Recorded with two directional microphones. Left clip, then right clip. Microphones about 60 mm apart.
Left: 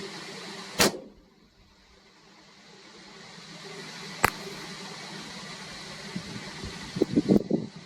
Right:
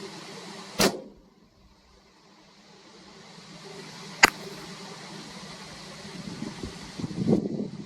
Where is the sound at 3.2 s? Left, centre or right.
Left.